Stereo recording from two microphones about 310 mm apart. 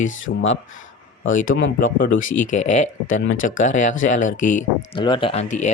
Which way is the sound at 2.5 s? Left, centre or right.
Left.